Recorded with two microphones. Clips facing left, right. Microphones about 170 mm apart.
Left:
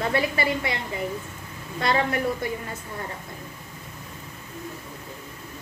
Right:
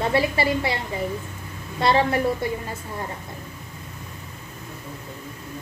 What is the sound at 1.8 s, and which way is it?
Speech, 30° right (ahead or behind).